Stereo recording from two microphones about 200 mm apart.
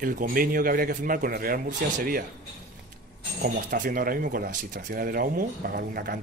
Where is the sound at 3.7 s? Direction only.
45° right (ahead or behind).